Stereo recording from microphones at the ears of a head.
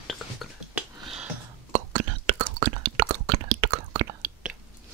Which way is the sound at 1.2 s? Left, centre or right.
Right.